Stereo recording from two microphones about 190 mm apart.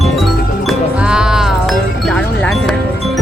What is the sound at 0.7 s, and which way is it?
Music, 5° right (ahead or behind).